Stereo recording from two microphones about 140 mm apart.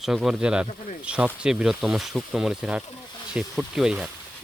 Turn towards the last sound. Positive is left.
turn(degrees=-5)  # may be behind; listen again after turning